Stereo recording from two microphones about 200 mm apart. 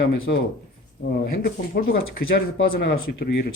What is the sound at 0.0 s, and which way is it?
Speech, 60° left (ahead or behind).